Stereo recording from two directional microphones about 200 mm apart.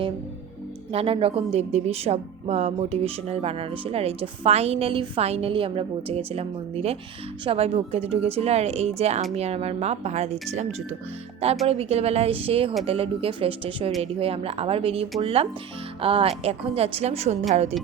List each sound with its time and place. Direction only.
0.9 s a woman's voice: 30° right (ahead or behind)